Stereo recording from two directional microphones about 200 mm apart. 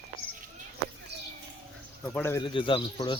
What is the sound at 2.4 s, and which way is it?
Speech, 25° left (ahead or behind).